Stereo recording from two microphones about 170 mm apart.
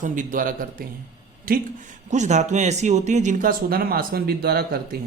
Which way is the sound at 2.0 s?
45° right (ahead or behind).